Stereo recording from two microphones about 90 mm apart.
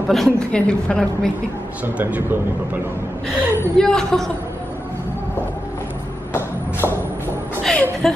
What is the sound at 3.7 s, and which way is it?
Speech, 5° left (ahead or behind).